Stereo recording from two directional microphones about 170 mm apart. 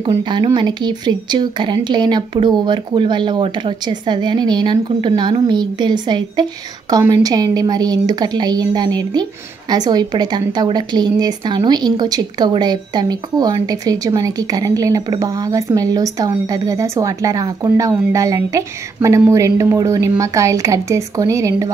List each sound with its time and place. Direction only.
0.0 s a woman's voice: 25° right (ahead or behind)